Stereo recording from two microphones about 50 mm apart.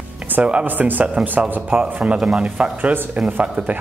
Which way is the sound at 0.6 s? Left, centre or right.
Right.